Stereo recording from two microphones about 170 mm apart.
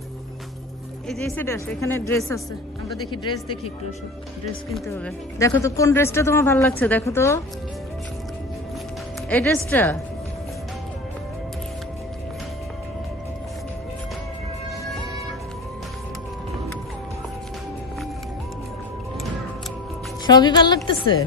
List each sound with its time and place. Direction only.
1.0 s speech: 5° left (ahead or behind)
1.4 s speech: 15° left (ahead or behind)
3.1 s speech: 30° left (ahead or behind)
4.8 s speech: 15° left (ahead or behind)
9.3 s speech: 10° left (ahead or behind)
20.2 s speech: 25° left (ahead or behind)